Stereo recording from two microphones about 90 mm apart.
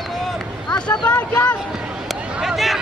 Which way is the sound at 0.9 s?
10° left (ahead or behind).